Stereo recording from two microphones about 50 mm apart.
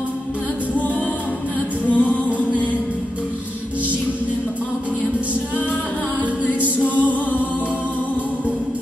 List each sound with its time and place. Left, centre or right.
1.9 s music: left
6.4 s music: right